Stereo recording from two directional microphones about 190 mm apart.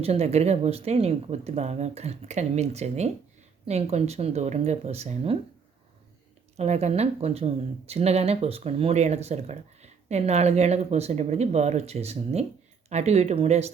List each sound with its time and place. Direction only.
0.0 s speech: 35° right (ahead or behind)
6.6 s speech: 35° right (ahead or behind)